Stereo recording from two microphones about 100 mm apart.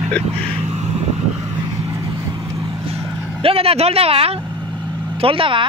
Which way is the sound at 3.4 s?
75° right (ahead or behind).